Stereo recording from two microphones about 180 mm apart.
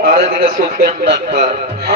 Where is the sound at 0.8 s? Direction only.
65° right (ahead or behind).